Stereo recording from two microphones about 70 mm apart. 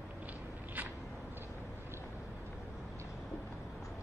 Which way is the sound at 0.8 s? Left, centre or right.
Right.